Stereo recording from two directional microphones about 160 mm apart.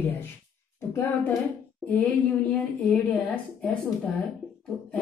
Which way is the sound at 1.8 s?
10° left (ahead or behind).